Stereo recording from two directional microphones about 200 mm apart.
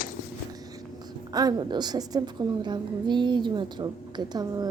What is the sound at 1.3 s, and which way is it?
A woman's voice, 20° right (ahead or behind).